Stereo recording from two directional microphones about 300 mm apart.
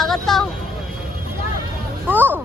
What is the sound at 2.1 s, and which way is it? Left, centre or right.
Speech, centre.